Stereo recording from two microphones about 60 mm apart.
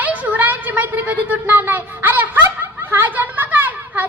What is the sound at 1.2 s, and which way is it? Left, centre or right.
Snicker, right.